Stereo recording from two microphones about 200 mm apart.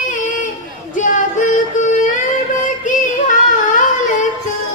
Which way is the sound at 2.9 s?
40° left (ahead or behind).